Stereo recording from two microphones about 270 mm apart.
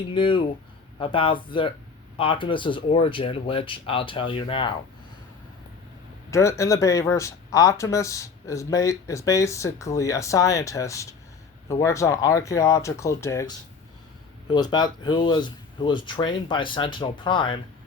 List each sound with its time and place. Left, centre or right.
0.1 s speech: centre
6.3 s speech: centre
14.5 s speech: centre